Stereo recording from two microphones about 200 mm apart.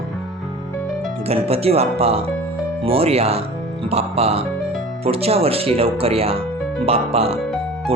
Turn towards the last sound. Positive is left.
turn(degrees=-30)  # may be behind; listen again after turning